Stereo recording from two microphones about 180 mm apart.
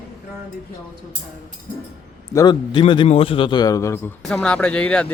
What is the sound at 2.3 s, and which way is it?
A man's voice, 20° left (ahead or behind).